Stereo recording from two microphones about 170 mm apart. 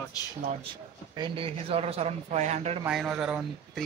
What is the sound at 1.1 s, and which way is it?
Speech, 30° right (ahead or behind).